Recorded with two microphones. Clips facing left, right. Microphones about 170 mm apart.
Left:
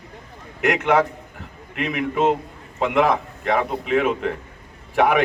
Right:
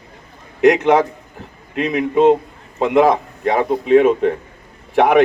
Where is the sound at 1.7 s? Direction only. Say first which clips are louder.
Right 7 dB; 35° right (ahead or behind).